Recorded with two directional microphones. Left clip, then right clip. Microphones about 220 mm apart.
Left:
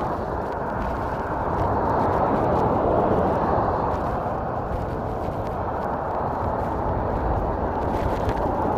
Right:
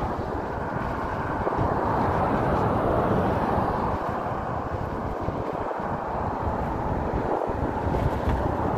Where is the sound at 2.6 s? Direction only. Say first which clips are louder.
Left 3 dB; 35° right (ahead or behind).